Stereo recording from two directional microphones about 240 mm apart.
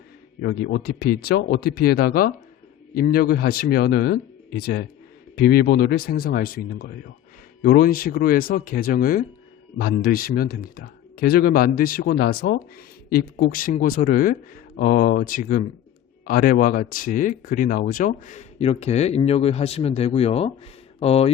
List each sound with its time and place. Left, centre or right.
0.4 s a man's voice: left